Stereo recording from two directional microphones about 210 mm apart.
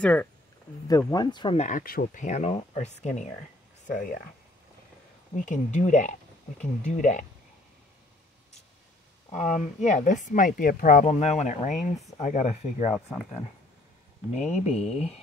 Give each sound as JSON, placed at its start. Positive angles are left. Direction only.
{"t": 0.0, "sound": "speech", "side_deg": 5}
{"t": 0.8, "sound": "speech", "side_deg": 20}
{"t": 5.3, "sound": "speech", "side_deg": 35}
{"t": 9.3, "sound": "speech", "side_deg": 35}
{"t": 12.9, "sound": "speech", "side_deg": 10}
{"t": 14.4, "sound": "speech", "side_deg": 30}